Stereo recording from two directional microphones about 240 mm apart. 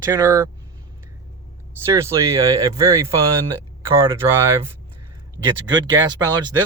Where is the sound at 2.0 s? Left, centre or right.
Centre.